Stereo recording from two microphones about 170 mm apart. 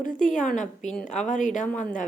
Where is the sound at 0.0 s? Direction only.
50° left (ahead or behind).